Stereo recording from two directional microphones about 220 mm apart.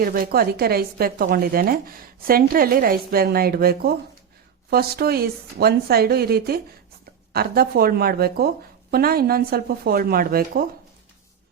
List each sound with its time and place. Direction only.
0.0 s speech: 40° right (ahead or behind)